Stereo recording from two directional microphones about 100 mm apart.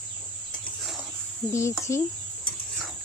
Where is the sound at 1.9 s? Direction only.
30° left (ahead or behind).